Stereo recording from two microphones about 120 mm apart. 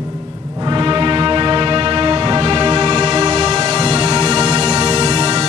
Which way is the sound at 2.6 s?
35° right (ahead or behind).